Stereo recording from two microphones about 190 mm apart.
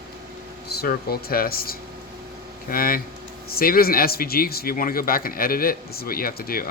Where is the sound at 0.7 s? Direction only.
55° left (ahead or behind).